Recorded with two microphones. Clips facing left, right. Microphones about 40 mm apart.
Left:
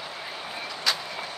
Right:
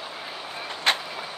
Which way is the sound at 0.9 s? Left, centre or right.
Right.